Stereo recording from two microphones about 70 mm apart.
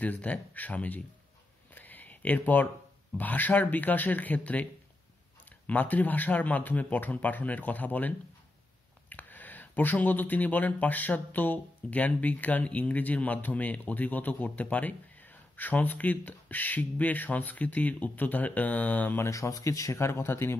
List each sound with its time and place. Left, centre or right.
0.0 s speech: left
1.7 s a sound: left
3.2 s speech: left
5.7 s speech: left
9.1 s speech: left
19.2 s speech: left